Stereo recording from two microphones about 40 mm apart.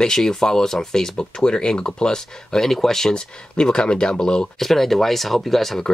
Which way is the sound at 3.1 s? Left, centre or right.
Centre.